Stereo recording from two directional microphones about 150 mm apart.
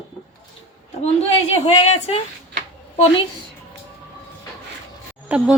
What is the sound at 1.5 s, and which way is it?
Speech, 40° left (ahead or behind).